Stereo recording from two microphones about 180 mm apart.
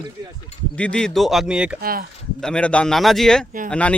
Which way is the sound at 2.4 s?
5° left (ahead or behind).